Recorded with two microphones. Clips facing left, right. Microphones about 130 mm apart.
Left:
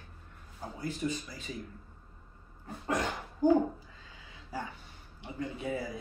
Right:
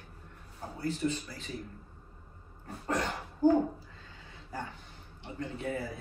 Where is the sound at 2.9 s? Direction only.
10° left (ahead or behind).